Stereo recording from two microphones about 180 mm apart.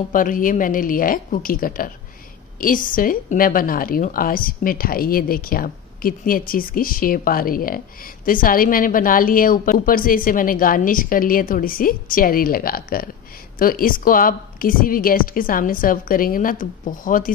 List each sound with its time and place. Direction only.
0.1 s a woman's voice: 50° left (ahead or behind)